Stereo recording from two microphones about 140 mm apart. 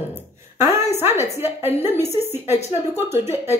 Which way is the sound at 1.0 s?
15° right (ahead or behind).